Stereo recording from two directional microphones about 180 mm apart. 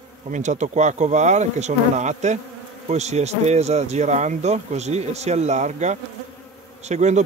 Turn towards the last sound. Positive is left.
turn(degrees=-40)  # may be behind; listen again after turning